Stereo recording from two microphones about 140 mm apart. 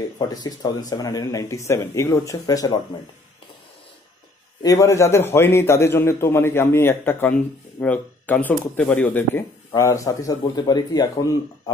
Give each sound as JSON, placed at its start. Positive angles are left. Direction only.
{"t": 0.2, "sound": "speech", "side_deg": 30}
{"t": 4.6, "sound": "a man's voice", "side_deg": 20}